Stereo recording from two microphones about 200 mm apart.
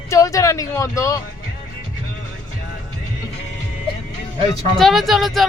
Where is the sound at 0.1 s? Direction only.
15° left (ahead or behind).